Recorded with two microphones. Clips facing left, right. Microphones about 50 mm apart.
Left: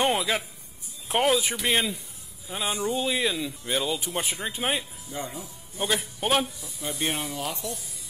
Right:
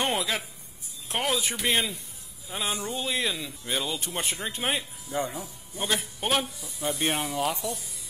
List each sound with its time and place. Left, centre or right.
0.0 s a man's voice: centre
6.9 s speech: right
7.5 s speech: right